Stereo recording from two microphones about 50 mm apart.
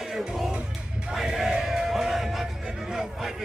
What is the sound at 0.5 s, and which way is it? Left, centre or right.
Music, right.